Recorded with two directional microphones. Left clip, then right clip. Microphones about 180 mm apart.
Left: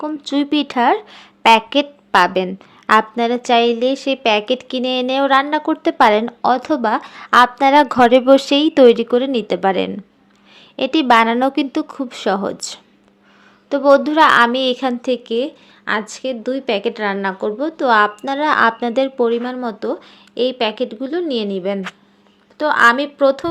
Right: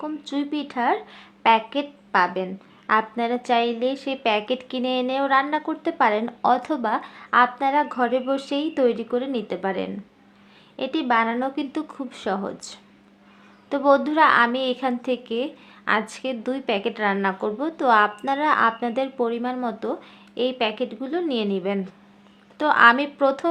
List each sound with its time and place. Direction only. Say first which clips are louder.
0.0 s speech: left 8 dB; 40° left (ahead or behind)
6.4 s a woman's voice: left 5 dB; 30° left (ahead or behind)
13.7 s a woman's voice: left 6 dB; 25° left (ahead or behind)